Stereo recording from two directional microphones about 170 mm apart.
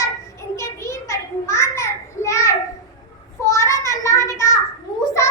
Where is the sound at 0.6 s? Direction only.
15° left (ahead or behind).